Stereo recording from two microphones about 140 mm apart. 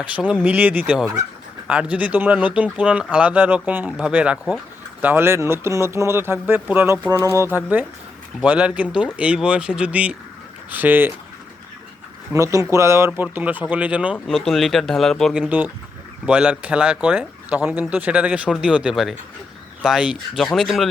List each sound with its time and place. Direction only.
0.0 s speech: 10° right (ahead or behind)
5.0 s speech: 15° right (ahead or behind)
12.3 s speech: 20° right (ahead or behind); by 20.9 s centre (ahead or behind)